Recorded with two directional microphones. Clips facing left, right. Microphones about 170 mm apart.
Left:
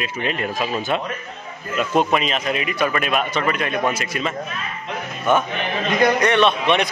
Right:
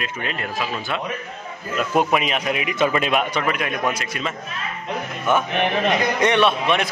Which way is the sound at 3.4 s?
10° right (ahead or behind).